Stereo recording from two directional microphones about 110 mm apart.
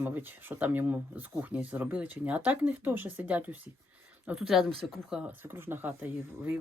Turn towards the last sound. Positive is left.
turn(degrees=-20)  # may be behind; listen again after turning